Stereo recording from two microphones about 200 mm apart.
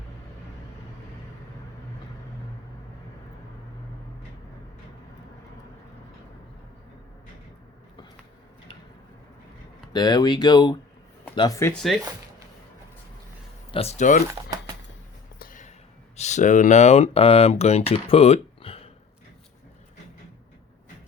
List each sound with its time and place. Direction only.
9.9 s speech: 20° left (ahead or behind)
13.7 s speech: 30° left (ahead or behind)
15.4 s a sound: 40° left (ahead or behind)
16.1 s speech: 35° left (ahead or behind)